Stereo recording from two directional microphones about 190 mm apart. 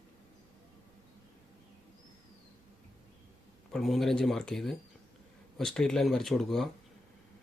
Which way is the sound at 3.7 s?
Centre (ahead or behind).